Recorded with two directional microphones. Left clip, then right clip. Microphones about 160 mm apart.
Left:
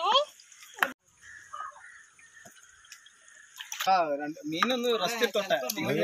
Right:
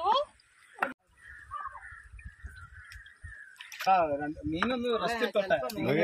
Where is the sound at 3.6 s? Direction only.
25° left (ahead or behind).